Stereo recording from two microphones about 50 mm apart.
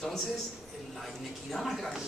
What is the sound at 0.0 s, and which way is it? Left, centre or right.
Speech, centre.